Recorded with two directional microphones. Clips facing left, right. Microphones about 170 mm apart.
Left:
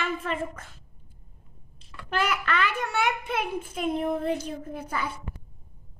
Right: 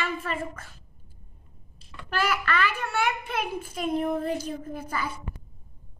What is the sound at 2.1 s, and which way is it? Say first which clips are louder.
A child's voice: even; 15° left (ahead or behind).